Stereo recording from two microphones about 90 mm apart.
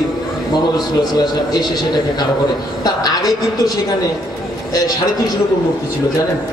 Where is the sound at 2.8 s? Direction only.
45° left (ahead or behind).